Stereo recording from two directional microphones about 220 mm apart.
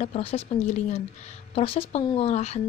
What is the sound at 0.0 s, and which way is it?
Speech, 30° left (ahead or behind).